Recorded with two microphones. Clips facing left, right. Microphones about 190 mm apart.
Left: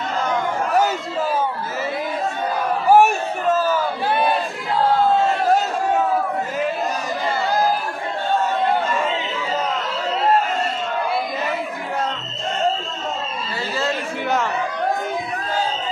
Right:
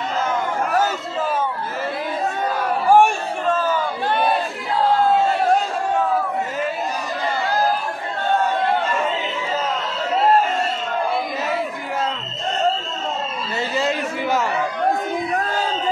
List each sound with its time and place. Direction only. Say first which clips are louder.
2.9 s chatter: left 1 dB; 5° left (ahead or behind)